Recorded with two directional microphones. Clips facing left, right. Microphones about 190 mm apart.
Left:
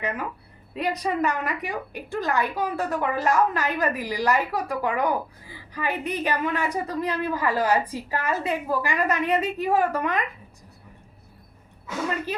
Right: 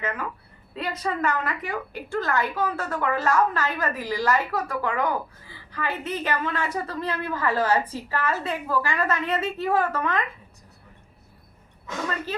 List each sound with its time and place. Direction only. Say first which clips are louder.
0.0 s a woman's voice: left 1 dB; 15° left (ahead or behind)
11.9 s a woman's voice: left 2 dB; 10° left (ahead or behind)